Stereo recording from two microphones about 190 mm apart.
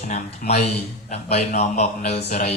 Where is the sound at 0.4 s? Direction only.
50° left (ahead or behind).